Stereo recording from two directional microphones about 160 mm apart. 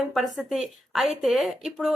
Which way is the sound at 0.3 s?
Centre (ahead or behind).